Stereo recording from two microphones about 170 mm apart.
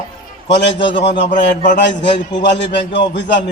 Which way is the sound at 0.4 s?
90° left.